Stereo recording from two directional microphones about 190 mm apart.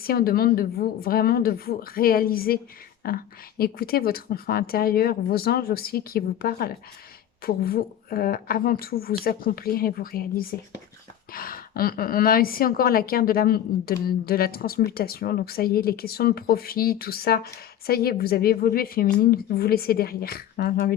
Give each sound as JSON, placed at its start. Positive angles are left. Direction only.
{"t": 0.0, "sound": "a woman's voice", "side_deg": 50}